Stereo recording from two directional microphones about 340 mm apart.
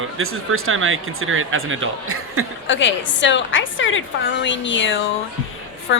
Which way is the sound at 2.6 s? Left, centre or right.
Left.